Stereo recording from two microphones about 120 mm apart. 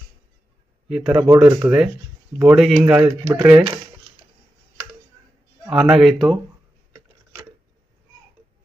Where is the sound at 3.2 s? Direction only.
25° right (ahead or behind).